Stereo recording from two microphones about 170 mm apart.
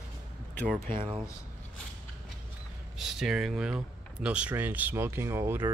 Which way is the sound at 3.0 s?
Centre (ahead or behind).